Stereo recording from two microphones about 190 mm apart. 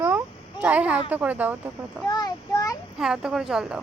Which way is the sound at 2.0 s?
20° left (ahead or behind).